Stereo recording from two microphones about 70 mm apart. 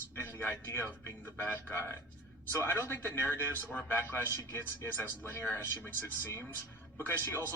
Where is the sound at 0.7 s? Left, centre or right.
Left.